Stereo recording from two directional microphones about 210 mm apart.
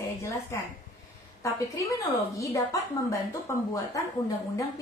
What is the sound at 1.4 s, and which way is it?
A woman's voice, 15° left (ahead or behind).